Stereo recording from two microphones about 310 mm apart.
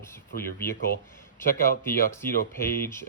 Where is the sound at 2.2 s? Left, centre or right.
Centre.